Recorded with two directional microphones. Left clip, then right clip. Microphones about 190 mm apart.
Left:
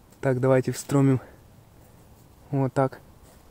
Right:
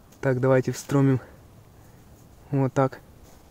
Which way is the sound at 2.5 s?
Centre (ahead or behind).